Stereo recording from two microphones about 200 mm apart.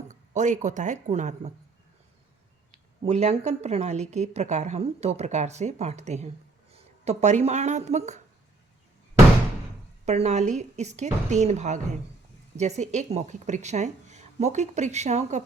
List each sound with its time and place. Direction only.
0.1 s speech: 40° right (ahead or behind)
2.7 s a woman's voice: 35° right (ahead or behind)
10.1 s a woman's voice: 35° right (ahead or behind)